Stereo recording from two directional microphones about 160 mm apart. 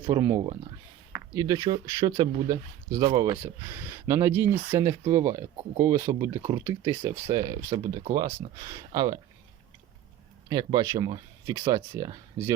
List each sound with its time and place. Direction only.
0.0 s speech: 20° right (ahead or behind)
3.3 s speech: 10° right (ahead or behind)
10.5 s speech: 25° right (ahead or behind)